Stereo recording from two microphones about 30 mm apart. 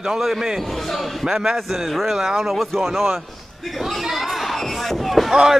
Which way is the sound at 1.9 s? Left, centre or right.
Centre.